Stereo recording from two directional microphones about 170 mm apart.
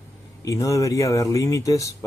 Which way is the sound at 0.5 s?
20° left (ahead or behind).